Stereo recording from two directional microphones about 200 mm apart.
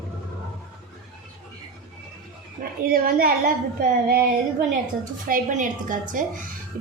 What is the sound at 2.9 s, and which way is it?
A woman's voice, 45° right (ahead or behind).